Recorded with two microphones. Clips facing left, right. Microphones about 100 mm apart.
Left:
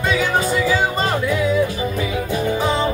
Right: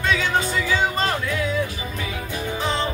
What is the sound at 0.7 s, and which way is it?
Music, 10° left (ahead or behind).